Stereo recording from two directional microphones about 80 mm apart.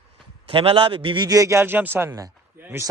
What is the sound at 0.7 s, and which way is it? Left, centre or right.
Speech, right.